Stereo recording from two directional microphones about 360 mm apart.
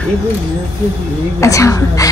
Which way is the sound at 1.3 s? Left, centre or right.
Centre.